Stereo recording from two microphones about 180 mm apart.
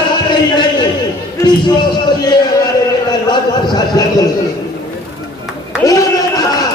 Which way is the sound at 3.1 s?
20° left (ahead or behind).